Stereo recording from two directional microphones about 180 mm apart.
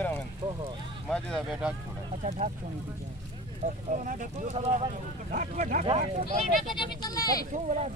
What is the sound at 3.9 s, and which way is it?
Speech, 40° right (ahead or behind).